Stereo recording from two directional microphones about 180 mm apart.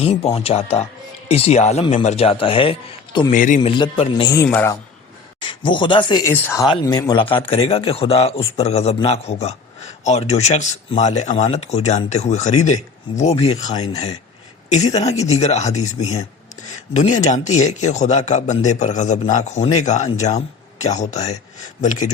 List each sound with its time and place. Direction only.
0.0 s speech: 35° left (ahead or behind)
3.3 s speech: 45° left (ahead or behind)
3.6 s speech: 30° left (ahead or behind)
4.4 s speech: 10° left (ahead or behind)
5.4 s speech: 30° left (ahead or behind)
6.3 s speech: 15° left (ahead or behind); by 22.1 s 45° left (ahead or behind)